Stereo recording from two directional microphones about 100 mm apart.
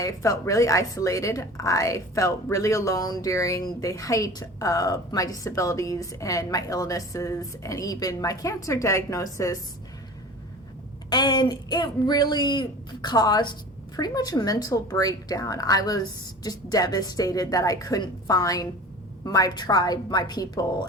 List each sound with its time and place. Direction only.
0.0 s a woman's voice: 35° left (ahead or behind)
11.1 s a woman's voice: 45° left (ahead or behind)